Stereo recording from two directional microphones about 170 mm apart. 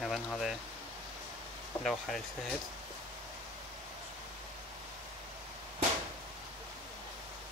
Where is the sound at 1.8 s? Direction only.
Centre (ahead or behind).